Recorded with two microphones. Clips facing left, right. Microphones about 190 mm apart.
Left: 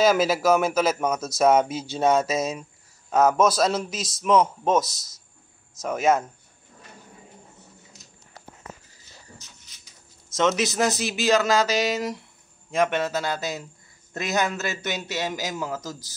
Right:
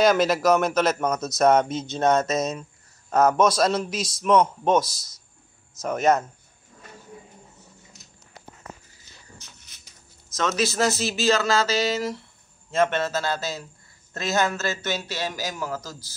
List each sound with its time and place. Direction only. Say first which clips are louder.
0.0 s speech: right 1 dB; 5° left (ahead or behind)
10.3 s a man's voice: left 2 dB; 20° left (ahead or behind)